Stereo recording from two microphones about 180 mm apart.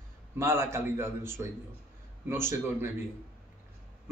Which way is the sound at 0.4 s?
15° right (ahead or behind).